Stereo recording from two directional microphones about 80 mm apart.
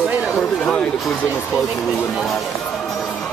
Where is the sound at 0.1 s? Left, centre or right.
Centre.